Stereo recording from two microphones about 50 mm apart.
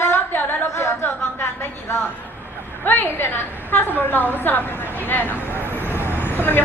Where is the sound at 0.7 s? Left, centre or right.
Left.